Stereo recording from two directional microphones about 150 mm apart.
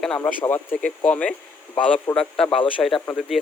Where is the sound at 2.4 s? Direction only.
35° left (ahead or behind).